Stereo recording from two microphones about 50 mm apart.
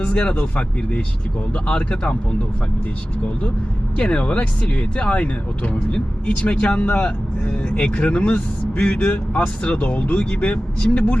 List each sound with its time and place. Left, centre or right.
0.0 s speech: left
3.9 s speech: left